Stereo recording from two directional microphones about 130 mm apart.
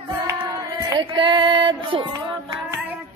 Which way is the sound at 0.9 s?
40° right (ahead or behind).